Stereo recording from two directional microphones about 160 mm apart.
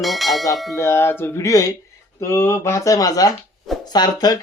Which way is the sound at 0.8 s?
15° left (ahead or behind).